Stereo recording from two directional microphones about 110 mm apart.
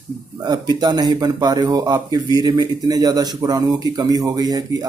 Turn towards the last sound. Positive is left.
turn(degrees=-35)  # may be behind; listen again after turning